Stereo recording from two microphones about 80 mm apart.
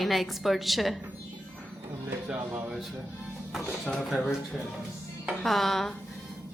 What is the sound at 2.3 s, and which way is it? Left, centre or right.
Music, centre.